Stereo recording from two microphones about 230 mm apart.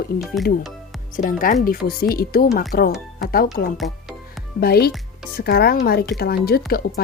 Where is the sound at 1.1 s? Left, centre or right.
Left.